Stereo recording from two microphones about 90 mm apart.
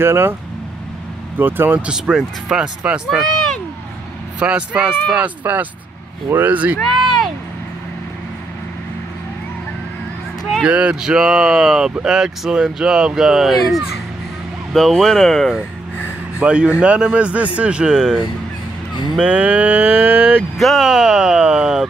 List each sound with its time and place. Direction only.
0.0 s speech: 25° right (ahead or behind)
1.4 s speech: 20° right (ahead or behind)
1.9 s speech: 5° right (ahead or behind)
3.2 s a sound: 5° left (ahead or behind)
4.4 s speech: 15° right (ahead or behind)
10.6 s speech: 15° right (ahead or behind); by 15.5 s 5° left (ahead or behind)
16.3 s speech: 10° right (ahead or behind)
20.5 s speech: centre (ahead or behind)